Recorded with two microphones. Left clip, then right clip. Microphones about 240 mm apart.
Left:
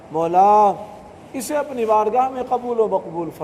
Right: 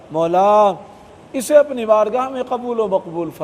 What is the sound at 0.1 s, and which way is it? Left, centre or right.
A man's voice, right.